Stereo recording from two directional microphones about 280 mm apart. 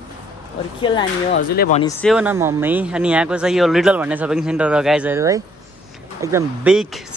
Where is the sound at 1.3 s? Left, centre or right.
Left.